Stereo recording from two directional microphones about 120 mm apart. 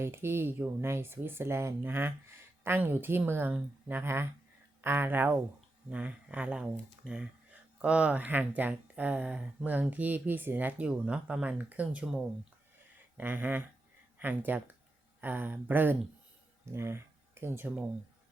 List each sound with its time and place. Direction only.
0.0 s speech: 20° right (ahead or behind)